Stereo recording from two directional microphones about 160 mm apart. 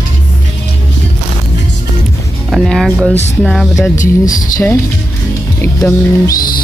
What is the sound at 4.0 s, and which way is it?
Speech, 55° left (ahead or behind).